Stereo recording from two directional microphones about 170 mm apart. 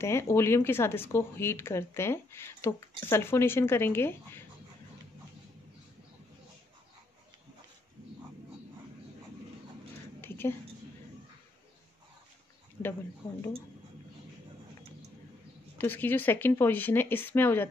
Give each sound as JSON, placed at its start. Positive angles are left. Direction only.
{"t": 0.0, "sound": "speech", "side_deg": 15}
{"t": 10.2, "sound": "a sound", "side_deg": 10}
{"t": 15.8, "sound": "speech", "side_deg": 10}